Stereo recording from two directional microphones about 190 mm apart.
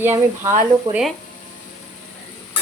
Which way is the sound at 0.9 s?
Centre (ahead or behind).